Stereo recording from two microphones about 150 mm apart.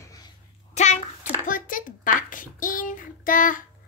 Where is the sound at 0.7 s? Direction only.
55° left (ahead or behind).